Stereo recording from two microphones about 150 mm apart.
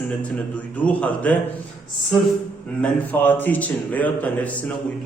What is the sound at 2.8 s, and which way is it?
A man's voice, 10° left (ahead or behind).